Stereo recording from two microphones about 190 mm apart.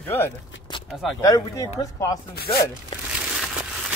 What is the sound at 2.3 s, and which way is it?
Chopping, 55° left (ahead or behind).